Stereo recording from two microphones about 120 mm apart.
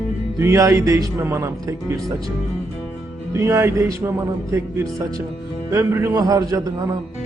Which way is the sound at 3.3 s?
25° right (ahead or behind).